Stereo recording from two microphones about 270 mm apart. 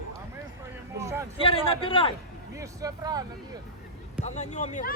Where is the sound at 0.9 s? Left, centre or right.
Centre.